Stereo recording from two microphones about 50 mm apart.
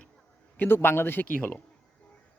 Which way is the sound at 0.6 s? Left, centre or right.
Left.